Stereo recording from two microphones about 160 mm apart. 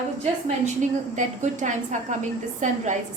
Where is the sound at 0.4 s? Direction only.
50° right (ahead or behind).